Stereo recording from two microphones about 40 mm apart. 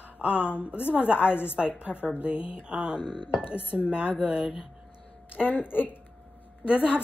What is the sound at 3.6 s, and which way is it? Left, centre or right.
Speech, left.